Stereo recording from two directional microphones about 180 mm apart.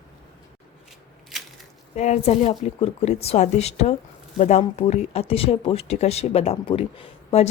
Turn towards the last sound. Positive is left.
turn(degrees=30)  # may be behind; listen again after turning